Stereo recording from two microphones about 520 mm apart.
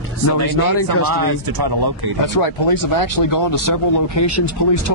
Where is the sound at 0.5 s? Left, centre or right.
Left.